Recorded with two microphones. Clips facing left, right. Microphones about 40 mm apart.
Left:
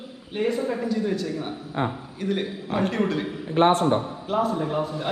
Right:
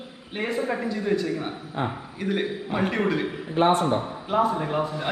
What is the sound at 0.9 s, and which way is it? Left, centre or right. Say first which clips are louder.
A man's voice: right 1 dB; centre.